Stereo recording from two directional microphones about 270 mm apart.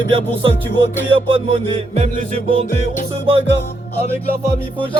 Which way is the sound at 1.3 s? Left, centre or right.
Right.